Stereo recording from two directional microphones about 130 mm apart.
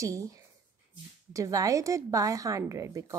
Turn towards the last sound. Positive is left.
turn(degrees=-25)  # may be behind; listen again after turning